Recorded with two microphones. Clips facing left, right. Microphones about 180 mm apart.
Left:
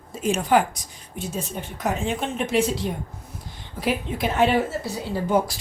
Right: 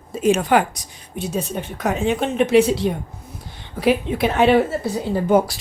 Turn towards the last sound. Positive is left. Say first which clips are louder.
# right 5 dB
turn(degrees=-55)  # may be behind; listen again after turning